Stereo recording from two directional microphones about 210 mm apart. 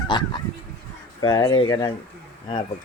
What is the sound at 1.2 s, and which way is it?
Speech, 20° left (ahead or behind).